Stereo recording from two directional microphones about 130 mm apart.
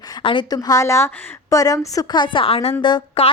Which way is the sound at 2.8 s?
35° left (ahead or behind).